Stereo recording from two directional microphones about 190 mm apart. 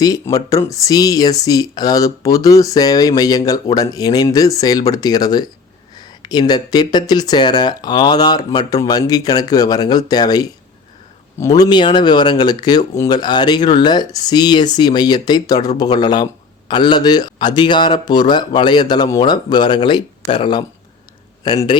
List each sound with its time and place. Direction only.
0.0 s speech: 20° left (ahead or behind)